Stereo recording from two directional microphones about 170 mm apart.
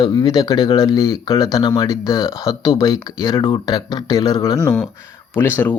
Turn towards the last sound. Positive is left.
turn(degrees=10)  # may be behind; listen again after turning